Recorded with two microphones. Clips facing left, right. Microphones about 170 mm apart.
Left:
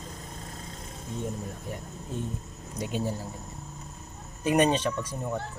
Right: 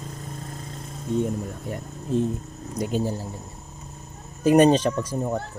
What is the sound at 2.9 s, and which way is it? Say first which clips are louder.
Speech: right 4 dB; 30° right (ahead or behind).